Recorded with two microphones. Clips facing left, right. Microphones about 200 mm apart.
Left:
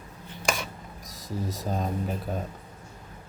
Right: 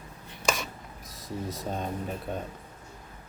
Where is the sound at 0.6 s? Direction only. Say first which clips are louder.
Left 1 dB; centre (ahead or behind).